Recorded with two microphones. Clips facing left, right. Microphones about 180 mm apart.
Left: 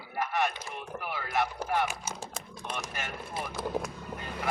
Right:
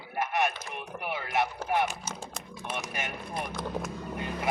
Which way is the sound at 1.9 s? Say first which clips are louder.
Even; 10° left (ahead or behind).